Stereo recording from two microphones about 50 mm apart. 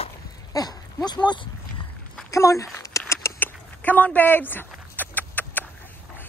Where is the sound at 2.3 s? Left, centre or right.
Left.